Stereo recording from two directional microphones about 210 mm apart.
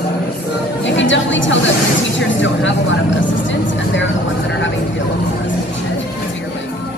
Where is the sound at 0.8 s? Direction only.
60° left (ahead or behind).